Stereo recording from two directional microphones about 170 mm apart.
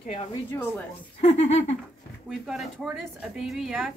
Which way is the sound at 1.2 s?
40° left (ahead or behind).